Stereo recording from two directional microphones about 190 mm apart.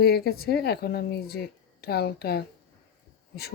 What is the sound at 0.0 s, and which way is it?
Speech, 55° left (ahead or behind).